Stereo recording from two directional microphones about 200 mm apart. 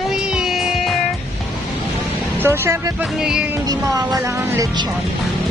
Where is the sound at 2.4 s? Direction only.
10° right (ahead or behind).